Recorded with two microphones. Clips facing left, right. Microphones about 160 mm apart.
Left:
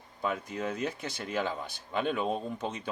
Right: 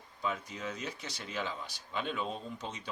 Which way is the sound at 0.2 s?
55° left (ahead or behind).